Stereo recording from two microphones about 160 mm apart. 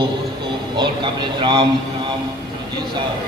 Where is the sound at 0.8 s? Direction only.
30° right (ahead or behind).